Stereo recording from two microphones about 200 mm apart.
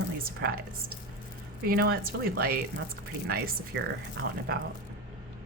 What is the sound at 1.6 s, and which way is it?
A woman's voice, 50° right (ahead or behind).